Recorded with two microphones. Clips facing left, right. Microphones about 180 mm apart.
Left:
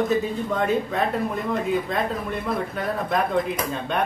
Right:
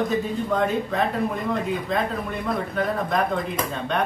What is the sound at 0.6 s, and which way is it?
Speech, centre (ahead or behind).